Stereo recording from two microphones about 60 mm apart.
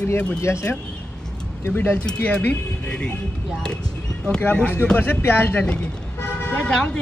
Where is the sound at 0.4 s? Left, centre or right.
Left.